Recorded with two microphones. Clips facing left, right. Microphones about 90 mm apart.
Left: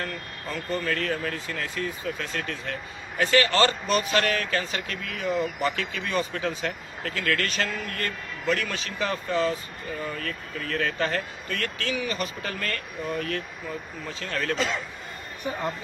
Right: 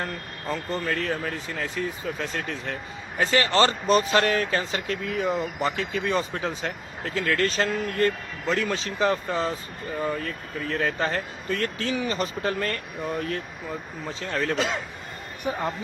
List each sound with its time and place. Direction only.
0.9 s speech: 10° right (ahead or behind)
1.5 s speech: 20° right (ahead or behind)